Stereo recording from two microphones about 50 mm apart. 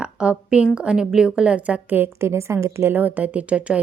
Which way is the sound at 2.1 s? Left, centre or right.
Right.